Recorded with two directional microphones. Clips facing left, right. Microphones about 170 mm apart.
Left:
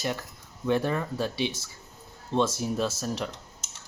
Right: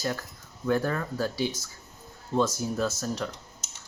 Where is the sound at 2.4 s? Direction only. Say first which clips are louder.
Even; 25° left (ahead or behind).